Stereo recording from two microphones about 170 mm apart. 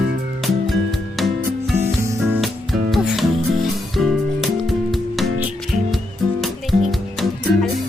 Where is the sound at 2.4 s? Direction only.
Centre (ahead or behind).